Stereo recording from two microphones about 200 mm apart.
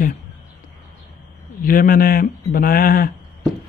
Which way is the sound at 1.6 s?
45° left (ahead or behind).